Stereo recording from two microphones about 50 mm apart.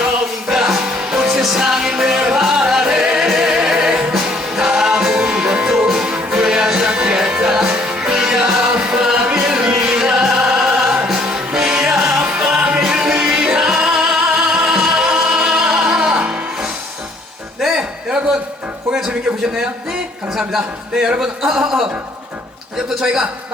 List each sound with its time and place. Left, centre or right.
0.0 s music: centre
12.2 s music: right
17.6 s a sound: centre
20.5 s speech: centre
23.0 s speech: centre